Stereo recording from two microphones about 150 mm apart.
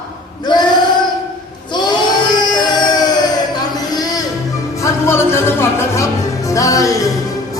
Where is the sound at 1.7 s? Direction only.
30° left (ahead or behind).